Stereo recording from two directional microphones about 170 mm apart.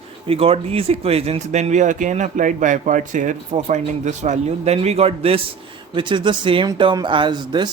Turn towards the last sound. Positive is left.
turn(degrees=-25)  # may be behind; listen again after turning